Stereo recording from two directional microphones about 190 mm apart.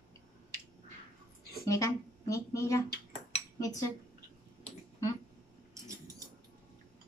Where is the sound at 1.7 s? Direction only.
15° left (ahead or behind).